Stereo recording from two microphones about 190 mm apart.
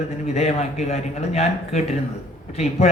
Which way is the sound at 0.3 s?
35° left (ahead or behind).